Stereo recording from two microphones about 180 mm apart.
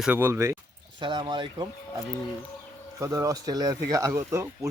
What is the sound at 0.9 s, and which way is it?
Speech, 25° right (ahead or behind).